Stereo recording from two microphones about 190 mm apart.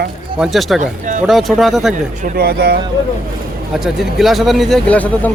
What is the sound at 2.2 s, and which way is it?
Speech, 55° right (ahead or behind).